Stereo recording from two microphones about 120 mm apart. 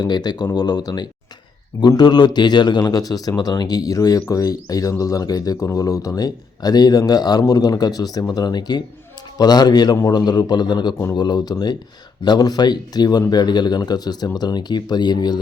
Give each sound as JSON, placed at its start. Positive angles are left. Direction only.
{"t": 0.0, "sound": "speech", "side_deg": 35}